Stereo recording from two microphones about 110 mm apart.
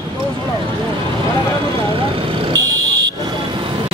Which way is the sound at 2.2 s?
35° right (ahead or behind).